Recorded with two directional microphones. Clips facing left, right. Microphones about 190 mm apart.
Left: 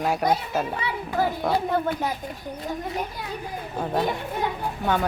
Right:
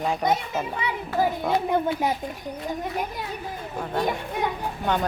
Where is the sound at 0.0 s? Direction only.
5° left (ahead or behind).